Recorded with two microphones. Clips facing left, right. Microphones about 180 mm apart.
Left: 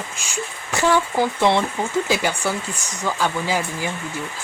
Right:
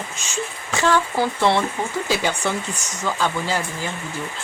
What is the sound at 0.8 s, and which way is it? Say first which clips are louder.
Speech: left 1 dB; 15° left (ahead or behind).